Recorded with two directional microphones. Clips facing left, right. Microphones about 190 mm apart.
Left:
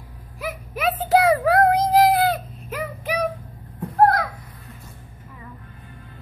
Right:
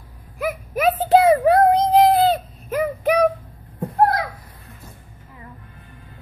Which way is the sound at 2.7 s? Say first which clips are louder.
Right 8 dB; 50° right (ahead or behind).